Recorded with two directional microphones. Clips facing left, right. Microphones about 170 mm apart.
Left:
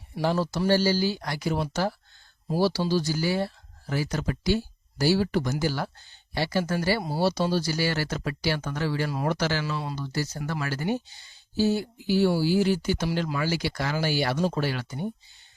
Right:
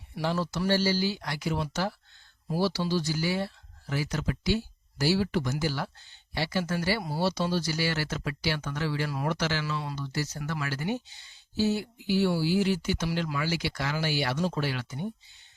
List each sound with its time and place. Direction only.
0.2 s speech: 40° left (ahead or behind)
9.0 s speech: 25° left (ahead or behind)
9.3 s speech: 40° left (ahead or behind)